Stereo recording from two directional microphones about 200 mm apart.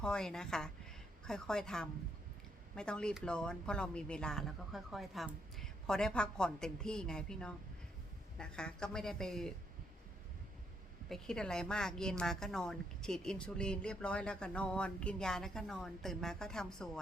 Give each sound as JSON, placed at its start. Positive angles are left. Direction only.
{"t": 0.0, "sound": "a woman's voice", "side_deg": 5}
{"t": 11.1, "sound": "a woman's voice", "side_deg": 5}